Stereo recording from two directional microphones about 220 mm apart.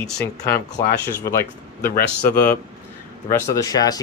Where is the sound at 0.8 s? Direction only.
10° left (ahead or behind).